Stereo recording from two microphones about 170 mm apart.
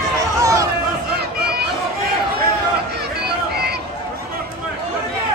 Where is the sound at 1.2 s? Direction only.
65° right (ahead or behind).